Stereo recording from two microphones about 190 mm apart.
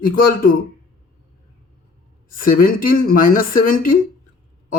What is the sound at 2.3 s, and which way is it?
Speech, 50° left (ahead or behind).